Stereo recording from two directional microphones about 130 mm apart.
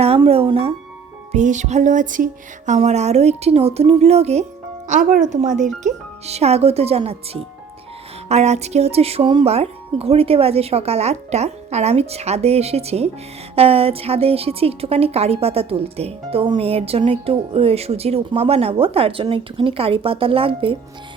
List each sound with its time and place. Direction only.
0.0 s music: 50° right (ahead or behind)
1.3 s music: 70° right (ahead or behind)
4.9 s speech: 80° right
5.6 s a woman's voice: 60° right (ahead or behind)
8.3 s a woman's voice: 60° right (ahead or behind)